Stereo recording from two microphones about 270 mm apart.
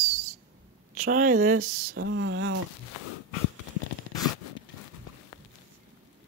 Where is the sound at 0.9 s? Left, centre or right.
Right.